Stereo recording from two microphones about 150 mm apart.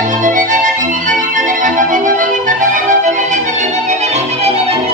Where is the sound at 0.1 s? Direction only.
60° right (ahead or behind).